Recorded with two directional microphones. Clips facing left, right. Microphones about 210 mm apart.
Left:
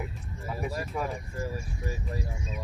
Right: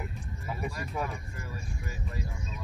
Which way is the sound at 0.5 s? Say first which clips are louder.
Left 2 dB; centre (ahead or behind).